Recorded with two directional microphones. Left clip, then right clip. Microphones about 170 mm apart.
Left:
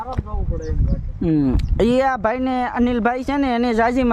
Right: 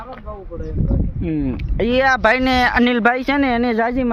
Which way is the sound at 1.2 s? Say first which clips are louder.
Left 6 dB; 40° left (ahead or behind).